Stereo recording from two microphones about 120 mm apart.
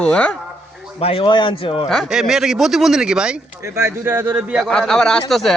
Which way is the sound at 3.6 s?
20° right (ahead or behind).